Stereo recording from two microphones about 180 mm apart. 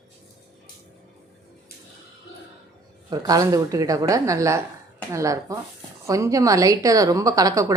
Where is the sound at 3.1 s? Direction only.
20° right (ahead or behind).